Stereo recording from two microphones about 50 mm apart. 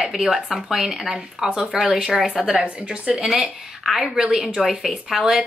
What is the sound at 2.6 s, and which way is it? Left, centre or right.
Speech, right.